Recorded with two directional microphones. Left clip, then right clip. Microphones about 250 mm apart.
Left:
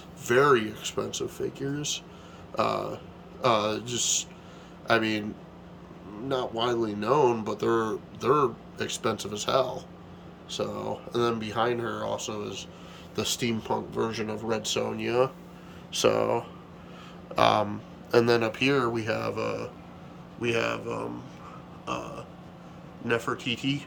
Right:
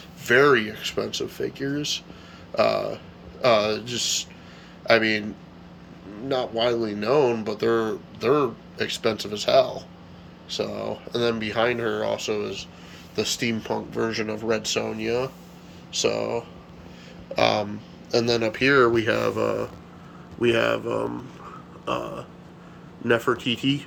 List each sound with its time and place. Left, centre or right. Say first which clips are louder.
0.3 s speech: right 4 dB; centre
6.2 s speech: right 5 dB; centre
19.1 s speech: right 6 dB; centre